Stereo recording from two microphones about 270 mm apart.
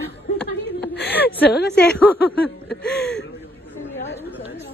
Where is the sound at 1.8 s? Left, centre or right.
Centre.